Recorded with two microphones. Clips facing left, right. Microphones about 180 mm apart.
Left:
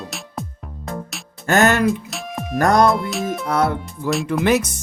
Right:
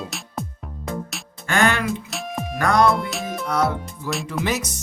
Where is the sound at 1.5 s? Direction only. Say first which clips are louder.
Left 5 dB; 45° left (ahead or behind).